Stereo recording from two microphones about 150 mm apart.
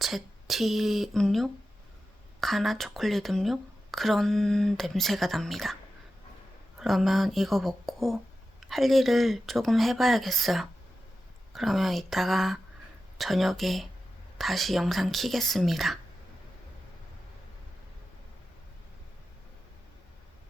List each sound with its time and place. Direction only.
0.0 s speech: centre (ahead or behind)
6.7 s speech: centre (ahead or behind)